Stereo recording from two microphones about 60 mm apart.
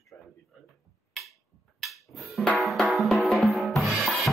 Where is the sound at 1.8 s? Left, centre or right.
Centre.